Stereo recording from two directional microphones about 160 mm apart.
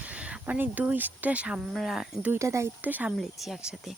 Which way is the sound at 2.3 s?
20° right (ahead or behind).